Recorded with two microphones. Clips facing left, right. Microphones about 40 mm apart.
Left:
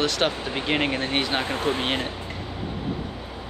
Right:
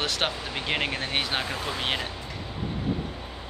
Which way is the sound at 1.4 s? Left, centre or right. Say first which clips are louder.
Left 6 dB; left.